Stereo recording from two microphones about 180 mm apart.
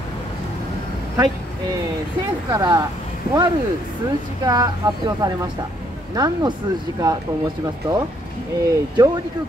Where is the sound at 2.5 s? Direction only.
25° right (ahead or behind).